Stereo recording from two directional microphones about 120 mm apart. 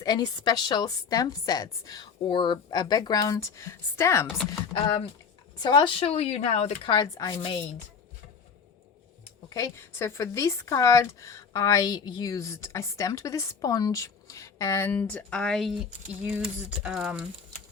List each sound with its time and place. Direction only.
0.0 s a woman's voice: 35° left (ahead or behind)
4.7 s a woman's voice: 45° left (ahead or behind)
6.1 s speech: 65° left (ahead or behind)
6.8 s a woman's voice: 35° left (ahead or behind)
9.5 s speech: 25° left (ahead or behind); by 17.2 s 5° right (ahead or behind)